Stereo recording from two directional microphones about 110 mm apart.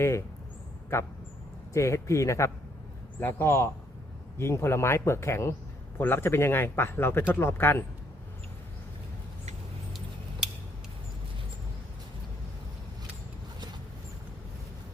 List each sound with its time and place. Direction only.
0.0 s speech: 25° left (ahead or behind)
1.7 s speech: 25° left (ahead or behind)